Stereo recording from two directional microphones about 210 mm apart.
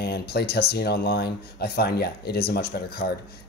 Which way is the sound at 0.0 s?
50° left (ahead or behind).